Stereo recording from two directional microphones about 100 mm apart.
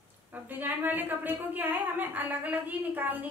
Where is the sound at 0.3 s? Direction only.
20° right (ahead or behind).